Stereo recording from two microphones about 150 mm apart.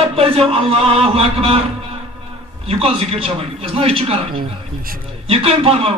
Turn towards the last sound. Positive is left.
turn(degrees=-40)  # may be behind; listen again after turning